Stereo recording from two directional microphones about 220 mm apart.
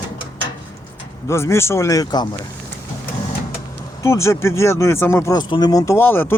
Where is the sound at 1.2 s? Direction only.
10° left (ahead or behind).